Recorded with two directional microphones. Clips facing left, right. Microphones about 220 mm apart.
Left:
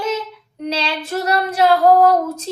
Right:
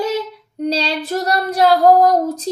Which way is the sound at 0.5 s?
35° right (ahead or behind).